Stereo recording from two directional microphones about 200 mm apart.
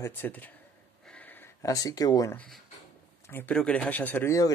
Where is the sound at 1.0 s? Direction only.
5° left (ahead or behind).